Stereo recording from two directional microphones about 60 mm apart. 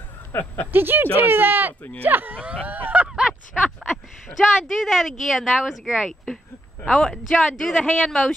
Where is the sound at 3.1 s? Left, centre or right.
Centre.